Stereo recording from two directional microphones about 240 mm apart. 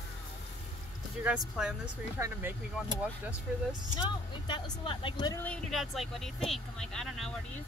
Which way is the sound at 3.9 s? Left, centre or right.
Centre.